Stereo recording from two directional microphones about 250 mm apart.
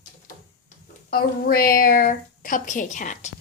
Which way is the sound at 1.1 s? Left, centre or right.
Left.